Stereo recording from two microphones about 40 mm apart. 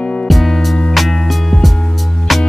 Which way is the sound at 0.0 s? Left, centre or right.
Left.